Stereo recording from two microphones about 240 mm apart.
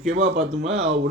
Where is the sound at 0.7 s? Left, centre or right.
Right.